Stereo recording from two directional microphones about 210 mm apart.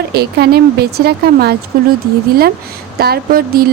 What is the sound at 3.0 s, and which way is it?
Speech, 45° right (ahead or behind).